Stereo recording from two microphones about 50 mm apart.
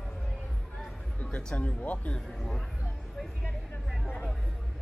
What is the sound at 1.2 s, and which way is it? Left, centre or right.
Speech, left.